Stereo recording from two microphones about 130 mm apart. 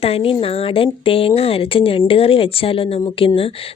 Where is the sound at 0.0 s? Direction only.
45° left (ahead or behind).